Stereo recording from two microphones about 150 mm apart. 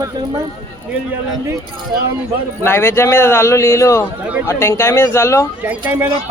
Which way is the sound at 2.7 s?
15° left (ahead or behind).